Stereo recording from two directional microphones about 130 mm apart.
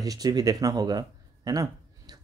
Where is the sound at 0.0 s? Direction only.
30° right (ahead or behind).